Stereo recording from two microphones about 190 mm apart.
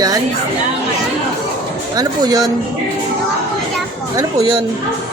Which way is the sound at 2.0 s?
20° right (ahead or behind).